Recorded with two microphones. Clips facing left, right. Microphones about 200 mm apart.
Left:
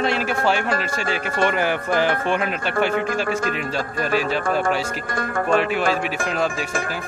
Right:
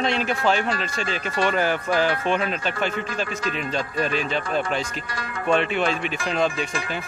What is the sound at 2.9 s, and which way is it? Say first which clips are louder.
Speech: left 6 dB; 55° left (ahead or behind).